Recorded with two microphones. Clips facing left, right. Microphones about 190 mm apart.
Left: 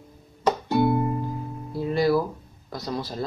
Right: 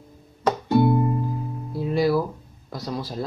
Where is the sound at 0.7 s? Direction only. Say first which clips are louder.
Right 4 dB; centre (ahead or behind).